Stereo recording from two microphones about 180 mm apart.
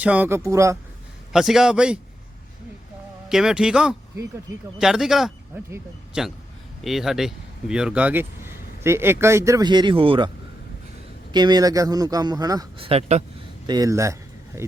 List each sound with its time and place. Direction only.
0.0 s speech: 10° right (ahead or behind)
1.3 s speech: centre (ahead or behind)
3.2 s speech: 5° right (ahead or behind); by 13.2 s 35° right (ahead or behind)
13.7 s a sound: 20° right (ahead or behind)